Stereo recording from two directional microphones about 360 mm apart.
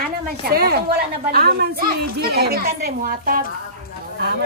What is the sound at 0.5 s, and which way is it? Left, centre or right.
Speech, right.